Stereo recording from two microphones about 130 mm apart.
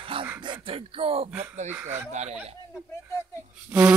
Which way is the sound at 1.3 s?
10° right (ahead or behind).